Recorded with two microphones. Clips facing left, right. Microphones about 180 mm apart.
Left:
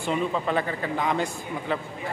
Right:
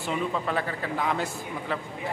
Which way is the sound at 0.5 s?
Centre (ahead or behind).